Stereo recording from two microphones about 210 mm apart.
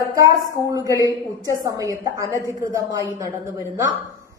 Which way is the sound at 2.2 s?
15° left (ahead or behind).